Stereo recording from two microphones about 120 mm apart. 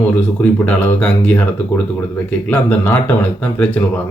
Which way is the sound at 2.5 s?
15° left (ahead or behind).